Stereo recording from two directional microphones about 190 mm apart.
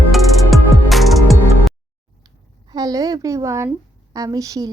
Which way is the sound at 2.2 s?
20° right (ahead or behind).